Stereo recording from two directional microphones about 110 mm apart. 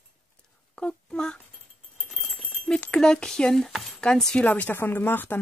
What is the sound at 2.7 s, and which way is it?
Speech, 10° left (ahead or behind).